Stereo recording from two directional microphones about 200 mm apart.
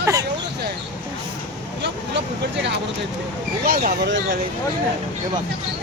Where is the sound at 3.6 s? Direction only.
45° right (ahead or behind).